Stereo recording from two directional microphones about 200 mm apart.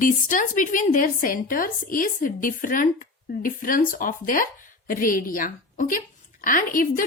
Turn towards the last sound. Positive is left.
turn(degrees=45)  # may be behind; listen again after turning